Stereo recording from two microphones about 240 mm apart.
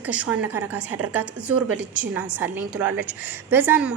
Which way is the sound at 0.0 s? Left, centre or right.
Centre.